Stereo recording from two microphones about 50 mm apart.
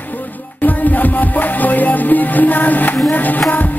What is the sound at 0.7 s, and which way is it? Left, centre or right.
Music, left.